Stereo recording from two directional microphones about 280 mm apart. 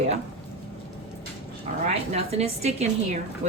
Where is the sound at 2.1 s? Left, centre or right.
Right.